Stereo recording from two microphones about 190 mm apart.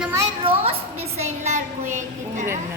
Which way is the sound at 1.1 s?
35° right (ahead or behind).